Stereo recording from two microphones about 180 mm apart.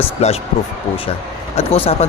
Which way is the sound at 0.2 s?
35° left (ahead or behind).